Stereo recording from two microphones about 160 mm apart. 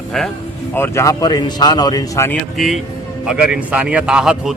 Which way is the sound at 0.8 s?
20° left (ahead or behind).